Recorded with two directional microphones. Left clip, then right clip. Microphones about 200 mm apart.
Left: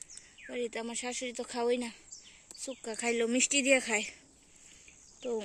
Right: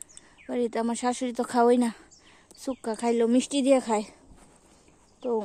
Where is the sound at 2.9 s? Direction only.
20° right (ahead or behind).